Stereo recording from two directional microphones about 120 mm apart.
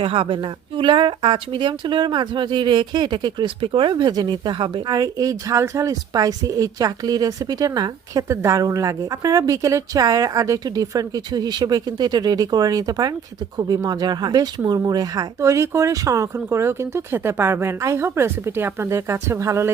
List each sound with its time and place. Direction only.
0.0 s a woman's voice: 50° right (ahead or behind)
4.9 s a woman's voice: 30° right (ahead or behind)